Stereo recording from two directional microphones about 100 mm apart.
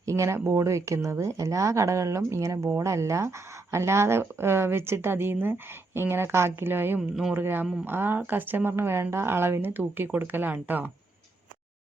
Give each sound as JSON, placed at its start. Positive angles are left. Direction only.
{"t": 0.0, "sound": "speech", "side_deg": -30}